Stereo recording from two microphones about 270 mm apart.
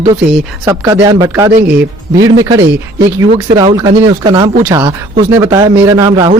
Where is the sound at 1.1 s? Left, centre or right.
Centre.